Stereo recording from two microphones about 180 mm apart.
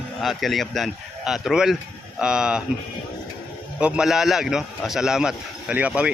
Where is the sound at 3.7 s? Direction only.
5° right (ahead or behind).